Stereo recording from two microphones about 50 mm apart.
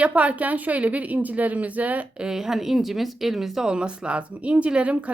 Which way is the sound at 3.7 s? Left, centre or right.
Right.